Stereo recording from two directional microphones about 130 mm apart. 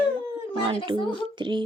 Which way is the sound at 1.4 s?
35° right (ahead or behind).